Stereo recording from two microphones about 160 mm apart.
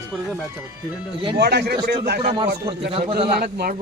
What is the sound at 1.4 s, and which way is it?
Speech, 90° right.